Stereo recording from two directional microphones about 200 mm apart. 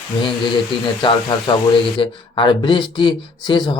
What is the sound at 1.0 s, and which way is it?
Speech, 20° left (ahead or behind).